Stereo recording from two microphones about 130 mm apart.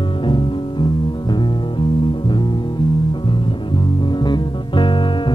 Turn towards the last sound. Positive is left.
turn(degrees=40)  # may be behind; listen again after turning